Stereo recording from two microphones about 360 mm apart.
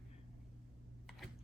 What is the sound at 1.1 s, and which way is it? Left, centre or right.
Computer keyboard, centre.